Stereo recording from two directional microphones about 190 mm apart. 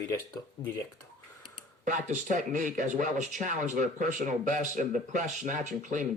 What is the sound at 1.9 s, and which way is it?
Speech, 40° right (ahead or behind).